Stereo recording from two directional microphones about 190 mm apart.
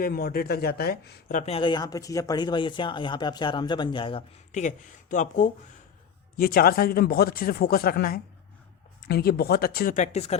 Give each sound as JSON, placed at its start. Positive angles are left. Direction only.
{"t": 0.0, "sound": "speech", "side_deg": 50}
{"t": 4.6, "sound": "speech", "side_deg": 40}